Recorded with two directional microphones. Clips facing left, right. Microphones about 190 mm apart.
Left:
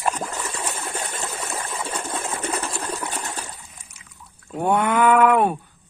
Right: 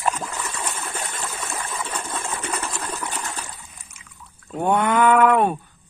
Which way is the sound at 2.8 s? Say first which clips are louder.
Left 1 dB; 30° left (ahead or behind).